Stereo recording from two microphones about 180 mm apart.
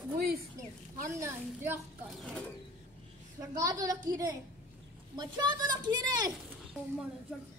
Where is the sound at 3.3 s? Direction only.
20° right (ahead or behind).